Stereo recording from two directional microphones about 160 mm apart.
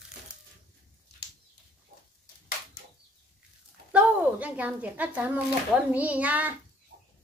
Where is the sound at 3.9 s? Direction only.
5° right (ahead or behind).